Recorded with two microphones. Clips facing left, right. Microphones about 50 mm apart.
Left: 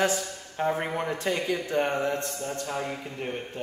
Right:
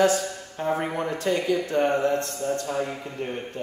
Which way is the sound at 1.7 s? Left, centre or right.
Centre.